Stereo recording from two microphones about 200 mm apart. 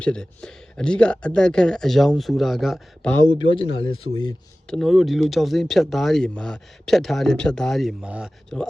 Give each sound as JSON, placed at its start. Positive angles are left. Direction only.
{"t": 0.0, "sound": "speech", "side_deg": 5}
{"t": 3.7, "sound": "speech", "side_deg": 80}
{"t": 4.7, "sound": "speech", "side_deg": 0}